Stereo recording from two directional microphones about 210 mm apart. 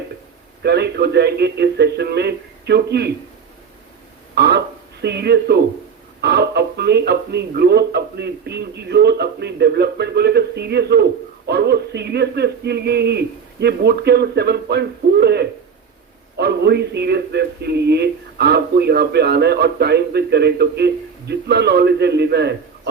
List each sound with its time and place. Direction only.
0.6 s speech: 50° right (ahead or behind)
4.4 s a sound: 50° right (ahead or behind)
6.2 s speech: 55° right (ahead or behind)